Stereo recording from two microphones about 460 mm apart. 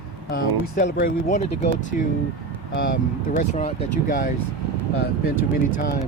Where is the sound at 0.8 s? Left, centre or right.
Centre.